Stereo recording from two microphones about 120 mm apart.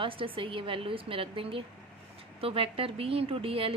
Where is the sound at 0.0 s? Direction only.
45° right (ahead or behind).